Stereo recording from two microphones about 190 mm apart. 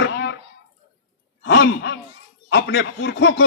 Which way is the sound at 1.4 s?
65° left (ahead or behind).